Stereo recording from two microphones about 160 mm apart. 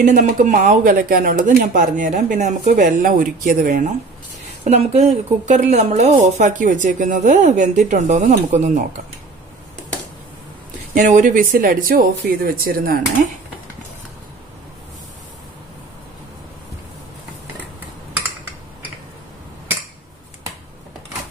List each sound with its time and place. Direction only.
0.0 s a woman's voice: 50° right (ahead or behind)
3.6 s a woman's voice: 50° right (ahead or behind)
11.0 s speech: 50° right (ahead or behind)